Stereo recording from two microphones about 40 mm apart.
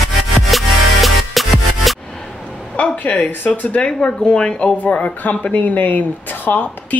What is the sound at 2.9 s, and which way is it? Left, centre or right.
Speech, left.